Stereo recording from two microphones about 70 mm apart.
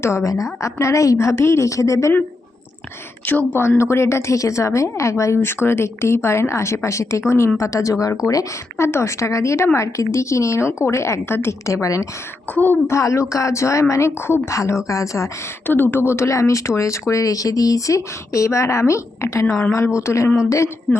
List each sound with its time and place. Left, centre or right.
0.0 s speech: left
3.2 s speech: left
3.8 s a woman's voice: left
8.8 s speech: left
12.5 s speech: left
12.9 s speech: left
15.6 s a woman's voice: left